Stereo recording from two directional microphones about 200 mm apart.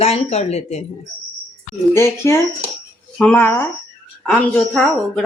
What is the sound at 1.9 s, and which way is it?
A woman's voice, 15° left (ahead or behind).